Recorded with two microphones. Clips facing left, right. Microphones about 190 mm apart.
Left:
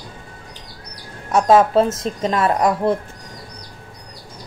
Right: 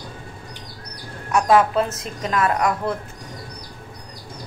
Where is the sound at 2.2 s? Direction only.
30° left (ahead or behind).